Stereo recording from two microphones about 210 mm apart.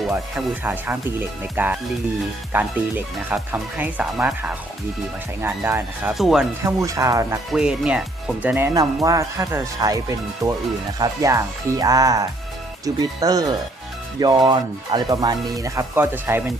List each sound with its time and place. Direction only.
0.3 s speech: 5° right (ahead or behind)
6.7 s speech: 15° right (ahead or behind)
7.5 s speech: 5° right (ahead or behind)